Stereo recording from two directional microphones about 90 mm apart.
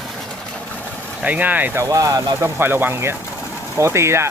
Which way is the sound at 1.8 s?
40° right (ahead or behind).